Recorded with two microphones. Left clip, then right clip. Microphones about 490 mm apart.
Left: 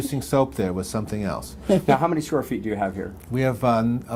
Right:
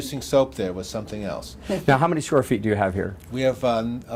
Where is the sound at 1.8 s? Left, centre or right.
Right.